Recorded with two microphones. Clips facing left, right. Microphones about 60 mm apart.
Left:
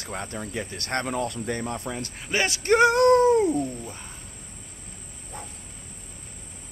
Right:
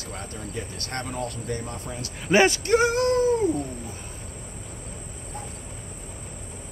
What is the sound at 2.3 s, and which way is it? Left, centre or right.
Speech, centre.